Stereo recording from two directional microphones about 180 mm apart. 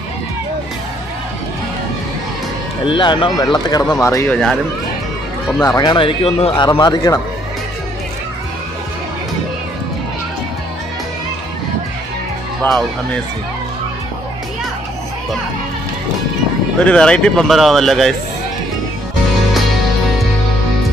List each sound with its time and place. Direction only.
2.8 s speech: 25° left (ahead or behind)
5.6 s speech: 20° left (ahead or behind)
12.6 s speech: 10° left (ahead or behind)
16.8 s speech: 5° left (ahead or behind)